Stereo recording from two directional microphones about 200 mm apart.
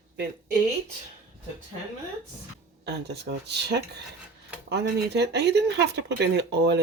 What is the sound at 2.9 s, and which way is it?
Speech, 55° right (ahead or behind).